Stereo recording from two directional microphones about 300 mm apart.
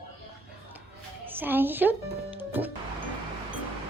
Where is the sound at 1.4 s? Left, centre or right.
Centre.